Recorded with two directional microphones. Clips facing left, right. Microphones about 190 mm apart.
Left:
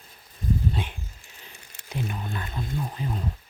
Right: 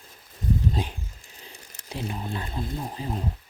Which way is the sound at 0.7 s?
35° right (ahead or behind).